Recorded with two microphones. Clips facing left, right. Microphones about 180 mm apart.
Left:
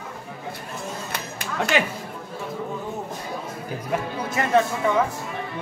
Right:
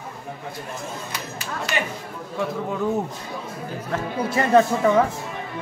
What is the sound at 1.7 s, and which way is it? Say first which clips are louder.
Speech: left 4 dB; 90° left.